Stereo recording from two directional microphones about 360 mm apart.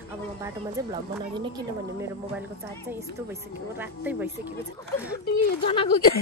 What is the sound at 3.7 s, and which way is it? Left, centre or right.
Speech, centre.